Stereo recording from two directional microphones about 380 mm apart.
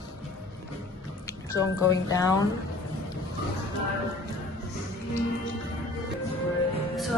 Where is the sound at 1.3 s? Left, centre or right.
Centre.